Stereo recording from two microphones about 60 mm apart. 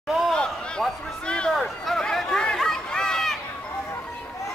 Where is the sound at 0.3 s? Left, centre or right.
Centre.